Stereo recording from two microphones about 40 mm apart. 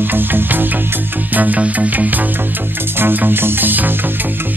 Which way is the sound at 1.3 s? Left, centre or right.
Right.